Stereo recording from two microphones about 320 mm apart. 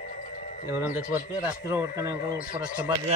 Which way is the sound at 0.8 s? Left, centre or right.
Centre.